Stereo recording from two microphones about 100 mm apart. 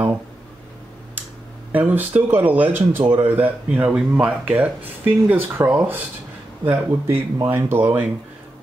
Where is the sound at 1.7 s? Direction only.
15° right (ahead or behind).